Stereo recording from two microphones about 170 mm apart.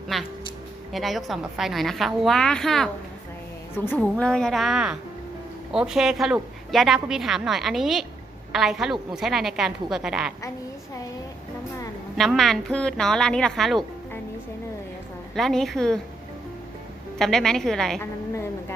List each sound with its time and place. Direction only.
0.1 s a woman's voice: centre (ahead or behind)
12.1 s a woman's voice: centre (ahead or behind)
15.4 s a woman's voice: centre (ahead or behind)
17.2 s a woman's voice: centre (ahead or behind)